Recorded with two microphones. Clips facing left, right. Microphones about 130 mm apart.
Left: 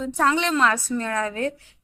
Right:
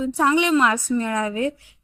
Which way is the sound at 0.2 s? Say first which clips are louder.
Right 2 dB; 10° right (ahead or behind).